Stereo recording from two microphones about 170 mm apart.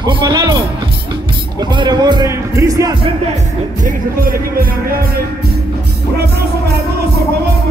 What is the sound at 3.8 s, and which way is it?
Music, 55° right (ahead or behind).